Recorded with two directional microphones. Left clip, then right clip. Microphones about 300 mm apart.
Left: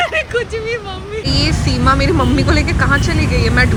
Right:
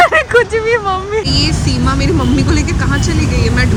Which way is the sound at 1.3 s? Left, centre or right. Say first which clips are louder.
Right 2 dB; centre.